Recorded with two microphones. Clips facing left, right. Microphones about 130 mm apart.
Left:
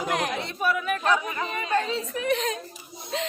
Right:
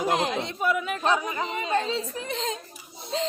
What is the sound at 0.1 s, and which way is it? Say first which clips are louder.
Speech: right 2 dB; 20° right (ahead or behind).